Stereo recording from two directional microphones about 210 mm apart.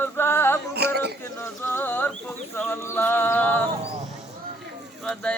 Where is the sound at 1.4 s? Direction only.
10° left (ahead or behind).